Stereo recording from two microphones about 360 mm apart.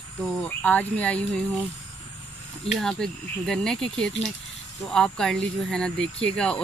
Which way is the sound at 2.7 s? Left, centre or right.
Centre.